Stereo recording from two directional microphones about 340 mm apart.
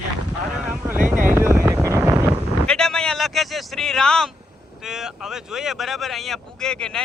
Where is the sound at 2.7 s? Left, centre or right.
Centre.